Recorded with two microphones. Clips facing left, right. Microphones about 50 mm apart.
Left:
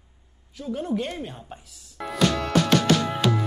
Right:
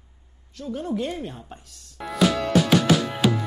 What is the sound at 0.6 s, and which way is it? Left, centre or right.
Speech, centre.